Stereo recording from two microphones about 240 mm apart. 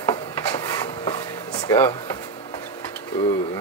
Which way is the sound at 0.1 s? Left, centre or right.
Centre.